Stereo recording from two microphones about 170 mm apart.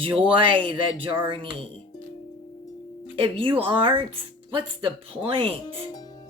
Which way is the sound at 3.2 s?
30° right (ahead or behind).